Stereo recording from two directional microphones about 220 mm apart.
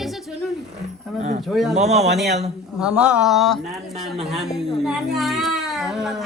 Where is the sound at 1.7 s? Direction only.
30° right (ahead or behind).